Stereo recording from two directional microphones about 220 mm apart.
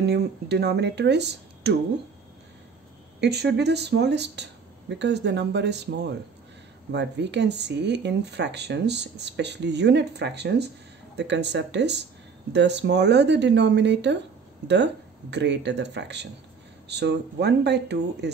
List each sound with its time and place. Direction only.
0.0 s speech: 50° right (ahead or behind)
3.2 s speech: 50° right (ahead or behind)